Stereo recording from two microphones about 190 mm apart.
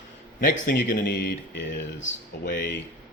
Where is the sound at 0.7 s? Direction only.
60° left (ahead or behind).